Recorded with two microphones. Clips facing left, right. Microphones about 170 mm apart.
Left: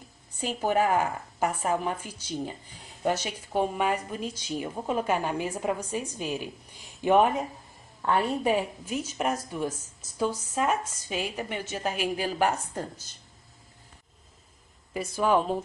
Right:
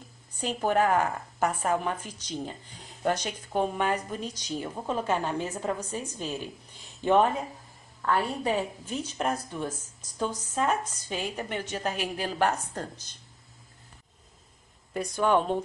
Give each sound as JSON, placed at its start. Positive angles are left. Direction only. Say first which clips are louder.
{"t": 0.4, "sound": "a woman's voice", "louder": "even", "side_deg": 10}
{"t": 8.8, "sound": "a woman's voice", "louder": "left 1 dB", "side_deg": 5}
{"t": 15.0, "sound": "speech", "louder": "even", "side_deg": 5}